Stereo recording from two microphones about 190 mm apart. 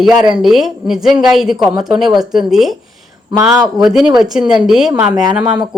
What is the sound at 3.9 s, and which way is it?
A woman's voice, centre (ahead or behind).